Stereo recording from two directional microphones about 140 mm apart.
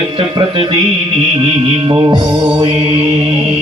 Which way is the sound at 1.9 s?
35° right (ahead or behind).